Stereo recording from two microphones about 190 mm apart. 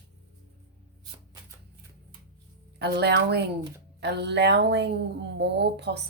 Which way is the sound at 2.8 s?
60° right (ahead or behind).